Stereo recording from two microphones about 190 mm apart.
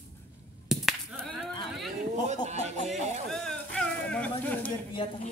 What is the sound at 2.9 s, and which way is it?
Music, 35° right (ahead or behind).